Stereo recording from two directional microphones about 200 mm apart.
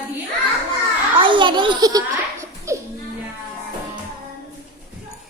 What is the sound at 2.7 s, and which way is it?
Music, 15° right (ahead or behind).